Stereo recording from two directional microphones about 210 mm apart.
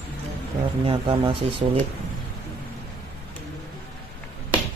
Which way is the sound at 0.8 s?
25° right (ahead or behind).